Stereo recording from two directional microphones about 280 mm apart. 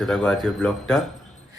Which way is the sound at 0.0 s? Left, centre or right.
Centre.